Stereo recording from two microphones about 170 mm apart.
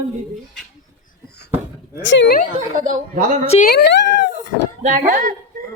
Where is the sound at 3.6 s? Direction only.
65° left (ahead or behind).